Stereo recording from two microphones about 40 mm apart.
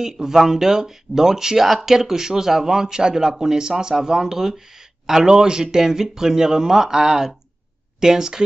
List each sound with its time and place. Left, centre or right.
0.0 s speech: centre